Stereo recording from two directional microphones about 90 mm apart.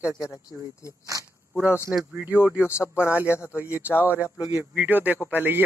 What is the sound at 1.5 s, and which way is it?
Speech, 15° right (ahead or behind).